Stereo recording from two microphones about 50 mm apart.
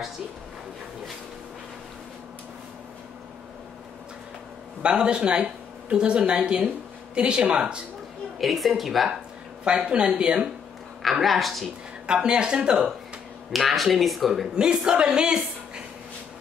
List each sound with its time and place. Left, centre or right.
4.8 s speech: centre
8.4 s speech: centre
9.7 s speech: centre
11.0 s speech: centre
12.1 s speech: centre
13.5 s speech: centre
14.5 s a woman's voice: centre